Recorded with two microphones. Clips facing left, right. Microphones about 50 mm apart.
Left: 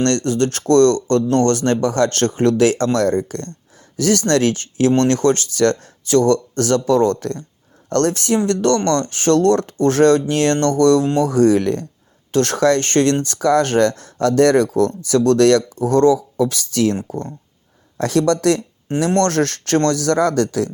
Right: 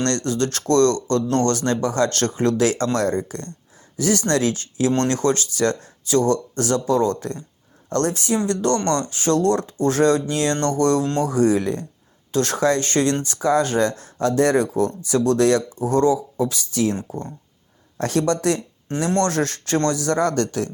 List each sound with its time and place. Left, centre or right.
0.0 s speech: left
8.4 s speech: left
18.0 s speech: left
19.0 s speech: left